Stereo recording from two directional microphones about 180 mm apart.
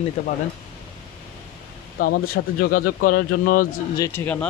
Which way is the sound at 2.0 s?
65° left (ahead or behind).